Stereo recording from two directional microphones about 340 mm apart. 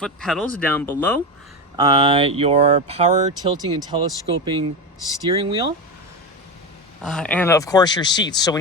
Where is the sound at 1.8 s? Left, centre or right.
Centre.